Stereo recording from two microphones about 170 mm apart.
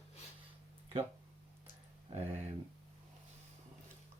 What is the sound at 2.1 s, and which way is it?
Speech, 40° right (ahead or behind).